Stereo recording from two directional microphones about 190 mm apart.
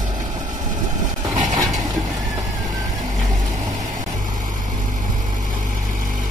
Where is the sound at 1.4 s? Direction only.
20° right (ahead or behind).